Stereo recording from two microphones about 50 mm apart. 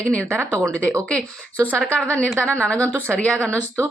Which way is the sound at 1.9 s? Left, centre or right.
Left.